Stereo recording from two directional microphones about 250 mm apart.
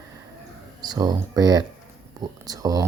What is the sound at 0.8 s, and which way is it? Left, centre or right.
Speech, centre.